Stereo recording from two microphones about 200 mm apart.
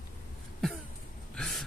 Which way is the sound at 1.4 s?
Centre (ahead or behind).